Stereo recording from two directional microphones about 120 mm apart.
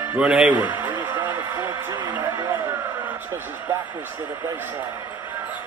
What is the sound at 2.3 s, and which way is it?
Music, 30° right (ahead or behind).